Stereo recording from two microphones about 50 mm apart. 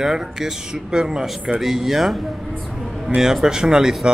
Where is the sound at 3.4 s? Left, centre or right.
Centre.